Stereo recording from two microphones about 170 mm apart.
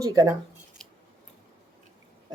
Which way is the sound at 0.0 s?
20° right (ahead or behind).